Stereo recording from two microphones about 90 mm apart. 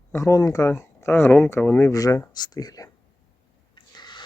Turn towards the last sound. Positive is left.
turn(degrees=55)  # may be behind; listen again after turning